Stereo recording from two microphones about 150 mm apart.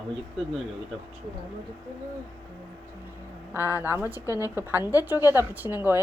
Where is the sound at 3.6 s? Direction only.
20° left (ahead or behind).